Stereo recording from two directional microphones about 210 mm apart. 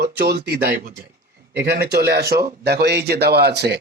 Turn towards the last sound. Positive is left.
turn(degrees=-50)  # may be behind; listen again after turning